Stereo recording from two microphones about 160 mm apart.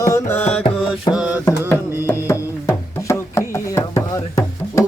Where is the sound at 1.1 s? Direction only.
5° right (ahead or behind).